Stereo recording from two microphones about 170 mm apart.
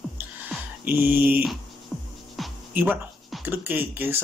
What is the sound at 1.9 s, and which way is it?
Music, 5° left (ahead or behind).